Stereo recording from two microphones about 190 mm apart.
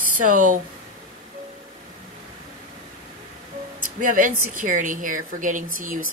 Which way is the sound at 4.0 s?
45° right (ahead or behind).